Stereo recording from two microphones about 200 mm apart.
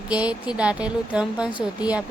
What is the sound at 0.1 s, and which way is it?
Speech, 5° right (ahead or behind).